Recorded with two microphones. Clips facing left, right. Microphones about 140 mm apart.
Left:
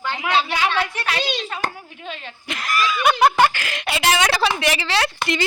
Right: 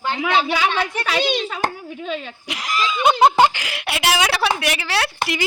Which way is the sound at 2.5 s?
15° right (ahead or behind).